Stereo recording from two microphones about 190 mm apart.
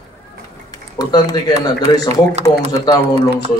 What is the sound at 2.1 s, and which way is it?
Speech, 35° right (ahead or behind).